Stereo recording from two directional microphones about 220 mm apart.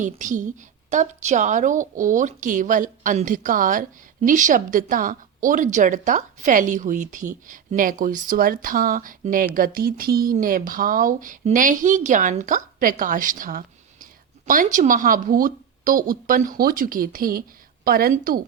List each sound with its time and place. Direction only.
0.0 s a woman's voice: 35° right (ahead or behind)